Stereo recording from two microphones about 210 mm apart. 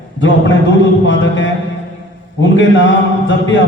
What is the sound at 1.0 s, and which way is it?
A man's voice, 60° left (ahead or behind).